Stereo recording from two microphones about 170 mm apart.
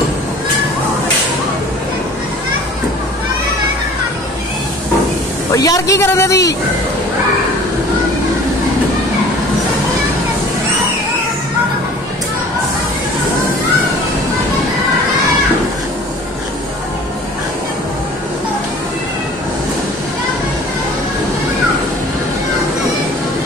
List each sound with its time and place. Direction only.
5.5 s speech: 20° left (ahead or behind)